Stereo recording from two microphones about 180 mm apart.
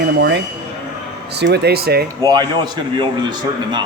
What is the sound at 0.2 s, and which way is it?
A man's voice, 75° right (ahead or behind).